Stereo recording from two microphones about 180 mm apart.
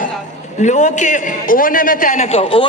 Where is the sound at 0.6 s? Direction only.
45° left (ahead or behind).